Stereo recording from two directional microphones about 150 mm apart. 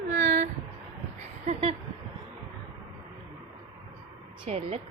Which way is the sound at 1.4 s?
40° right (ahead or behind).